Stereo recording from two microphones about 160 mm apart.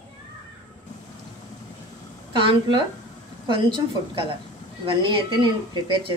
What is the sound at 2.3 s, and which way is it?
Speech, 30° right (ahead or behind).